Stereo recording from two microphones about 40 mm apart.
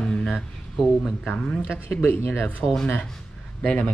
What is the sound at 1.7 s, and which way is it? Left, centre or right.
Speech, left.